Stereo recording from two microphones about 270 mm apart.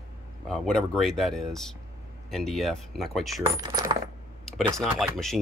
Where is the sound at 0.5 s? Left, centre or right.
Centre.